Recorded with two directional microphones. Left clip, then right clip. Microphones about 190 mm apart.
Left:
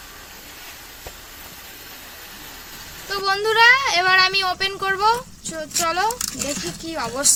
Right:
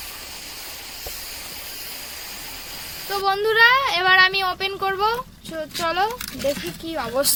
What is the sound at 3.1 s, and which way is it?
Speech, 50° right (ahead or behind).